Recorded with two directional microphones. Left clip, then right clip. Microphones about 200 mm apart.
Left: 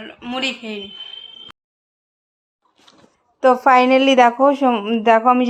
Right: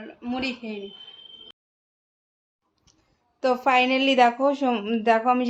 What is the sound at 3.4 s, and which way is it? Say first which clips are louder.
A woman's voice: left 8 dB; 25° left (ahead or behind).